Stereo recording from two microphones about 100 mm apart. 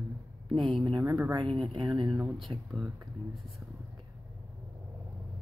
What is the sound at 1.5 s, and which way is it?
Speech, 50° right (ahead or behind).